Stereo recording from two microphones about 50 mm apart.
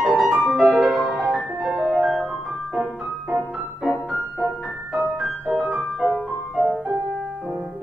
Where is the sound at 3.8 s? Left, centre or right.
Right.